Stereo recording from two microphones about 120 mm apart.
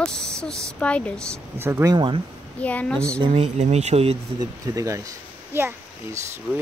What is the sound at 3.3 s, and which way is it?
Speech, 60° right (ahead or behind).